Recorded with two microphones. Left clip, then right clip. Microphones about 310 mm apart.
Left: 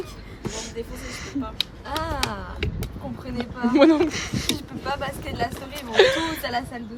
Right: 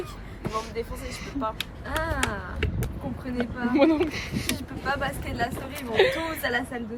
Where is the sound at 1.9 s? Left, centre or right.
Centre.